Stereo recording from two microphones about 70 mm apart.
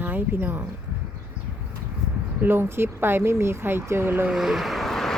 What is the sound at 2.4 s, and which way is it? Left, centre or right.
Speech, right.